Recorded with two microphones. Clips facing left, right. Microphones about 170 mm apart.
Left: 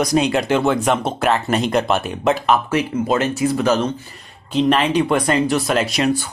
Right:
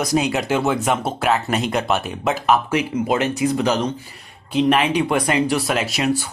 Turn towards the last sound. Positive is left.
turn(degrees=-5)  # may be behind; listen again after turning